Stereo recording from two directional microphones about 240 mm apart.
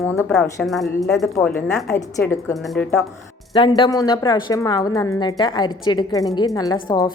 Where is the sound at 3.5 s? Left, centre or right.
Left.